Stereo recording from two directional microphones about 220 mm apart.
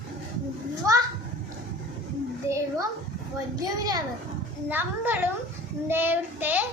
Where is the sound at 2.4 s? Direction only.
15° right (ahead or behind).